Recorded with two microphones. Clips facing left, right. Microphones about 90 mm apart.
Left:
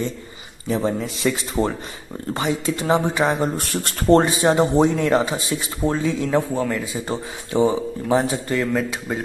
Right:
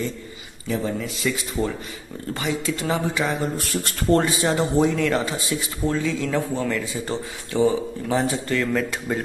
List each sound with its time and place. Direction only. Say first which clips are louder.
0.7 s speech: left 3 dB; 25° left (ahead or behind)
9.1 s speech: right 1 dB; 5° left (ahead or behind)